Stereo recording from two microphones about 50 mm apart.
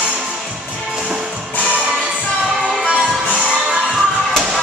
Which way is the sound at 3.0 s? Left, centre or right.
Centre.